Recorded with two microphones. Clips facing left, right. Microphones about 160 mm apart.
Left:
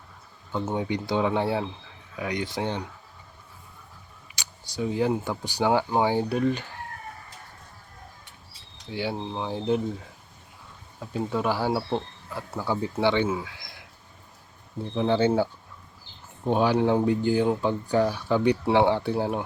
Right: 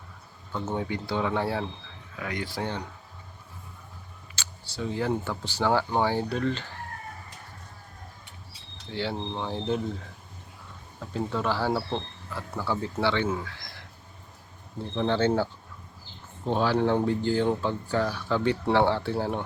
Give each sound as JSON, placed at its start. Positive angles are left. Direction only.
{"t": 0.5, "sound": "speech", "side_deg": 15}
{"t": 4.4, "sound": "speech", "side_deg": 15}
{"t": 8.9, "sound": "speech", "side_deg": 15}
{"t": 11.0, "sound": "speech", "side_deg": 10}
{"t": 14.9, "sound": "speech", "side_deg": 10}
{"t": 16.5, "sound": "speech", "side_deg": 15}